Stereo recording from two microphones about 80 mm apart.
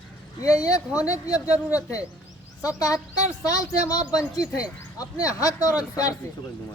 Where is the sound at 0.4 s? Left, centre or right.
Left.